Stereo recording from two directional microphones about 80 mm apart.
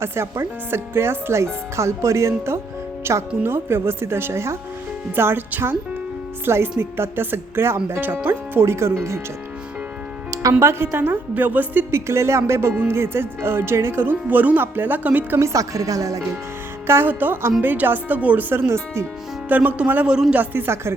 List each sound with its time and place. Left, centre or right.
0.0 s speech: right
10.6 s speech: right
11.9 s speech: right
15.4 s speech: right
16.8 s speech: right
19.5 s speech: right